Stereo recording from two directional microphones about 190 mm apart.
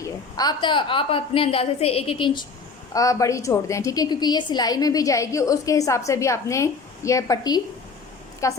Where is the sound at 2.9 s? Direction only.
15° left (ahead or behind).